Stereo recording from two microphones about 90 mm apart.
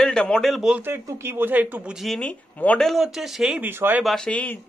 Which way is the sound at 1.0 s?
30° right (ahead or behind).